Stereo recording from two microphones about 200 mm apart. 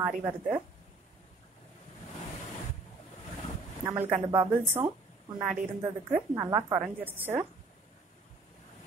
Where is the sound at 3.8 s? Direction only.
10° right (ahead or behind).